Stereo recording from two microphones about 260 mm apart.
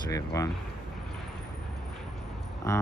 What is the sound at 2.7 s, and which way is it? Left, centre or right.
Speech, centre.